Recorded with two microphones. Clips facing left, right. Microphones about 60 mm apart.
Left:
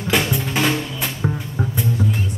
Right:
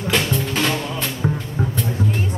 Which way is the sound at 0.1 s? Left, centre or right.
Centre.